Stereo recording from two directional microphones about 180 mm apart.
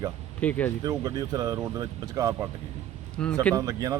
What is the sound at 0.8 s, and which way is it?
A man's voice, 20° right (ahead or behind).